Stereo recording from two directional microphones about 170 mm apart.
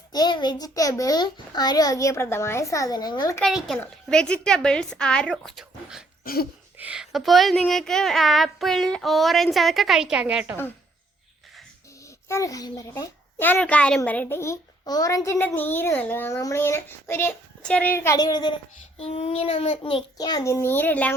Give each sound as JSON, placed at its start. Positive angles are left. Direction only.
{"t": 0.1, "sound": "a child's voice", "side_deg": 25}
{"t": 3.4, "sound": "speech", "side_deg": 0}
{"t": 6.2, "sound": "a sound", "side_deg": 65}
{"t": 6.7, "sound": "speech", "side_deg": -5}
{"t": 12.0, "sound": "a child's voice", "side_deg": 20}
{"t": 18.9, "sound": "child singing", "side_deg": 35}
{"t": 20.1, "sound": "a child's voice", "side_deg": 25}